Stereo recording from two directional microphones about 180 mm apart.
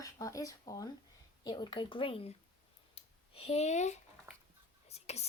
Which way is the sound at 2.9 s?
30° left (ahead or behind).